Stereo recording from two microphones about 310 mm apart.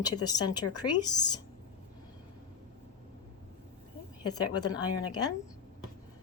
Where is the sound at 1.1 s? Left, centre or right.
Centre.